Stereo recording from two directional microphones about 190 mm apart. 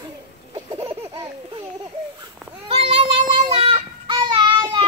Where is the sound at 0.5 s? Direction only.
30° right (ahead or behind).